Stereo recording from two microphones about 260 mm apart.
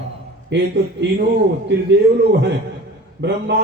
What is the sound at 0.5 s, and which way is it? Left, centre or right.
A man's voice, right.